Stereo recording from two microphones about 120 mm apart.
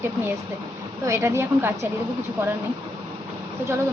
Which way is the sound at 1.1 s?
20° right (ahead or behind).